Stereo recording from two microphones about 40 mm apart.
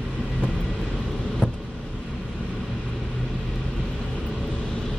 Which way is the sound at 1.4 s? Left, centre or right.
Left.